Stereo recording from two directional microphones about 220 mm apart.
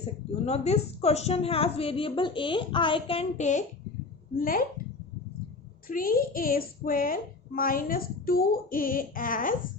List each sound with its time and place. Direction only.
0.4 s a woman's voice: 30° left (ahead or behind)
5.9 s a woman's voice: 40° left (ahead or behind)